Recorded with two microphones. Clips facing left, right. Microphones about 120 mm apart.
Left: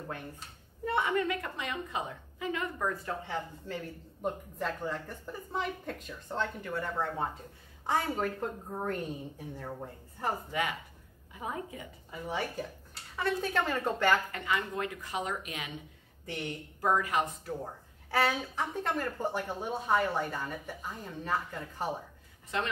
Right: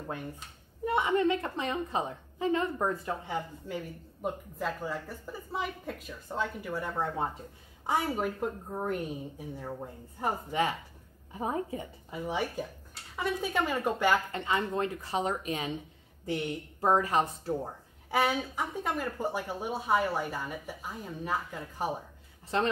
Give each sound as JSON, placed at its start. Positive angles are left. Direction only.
{"t": 0.8, "sound": "a woman's voice", "side_deg": -20}
{"t": 3.3, "sound": "speech", "side_deg": -15}
{"t": 10.5, "sound": "a woman's voice", "side_deg": -30}
{"t": 12.1, "sound": "speech", "side_deg": -15}
{"t": 14.3, "sound": "speech", "side_deg": -30}
{"t": 16.8, "sound": "speech", "side_deg": -30}
{"t": 18.1, "sound": "speech", "side_deg": -10}
{"t": 22.5, "sound": "speech", "side_deg": -35}